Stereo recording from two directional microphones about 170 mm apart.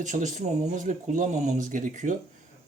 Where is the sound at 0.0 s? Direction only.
45° right (ahead or behind).